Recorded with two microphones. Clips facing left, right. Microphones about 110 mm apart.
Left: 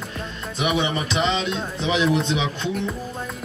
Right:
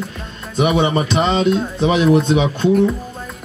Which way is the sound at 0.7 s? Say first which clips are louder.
Right 7 dB; 45° right (ahead or behind).